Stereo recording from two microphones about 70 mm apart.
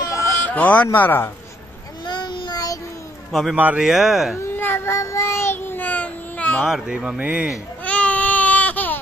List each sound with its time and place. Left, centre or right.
0.0 s baby cry: left
0.5 s a man's voice: left
2.0 s child singing: left
3.3 s a man's voice: centre
3.5 s speech: right
3.8 s speech: centre
4.4 s child singing: left
6.6 s speech: centre
7.2 s speech: right
7.8 s baby cry: centre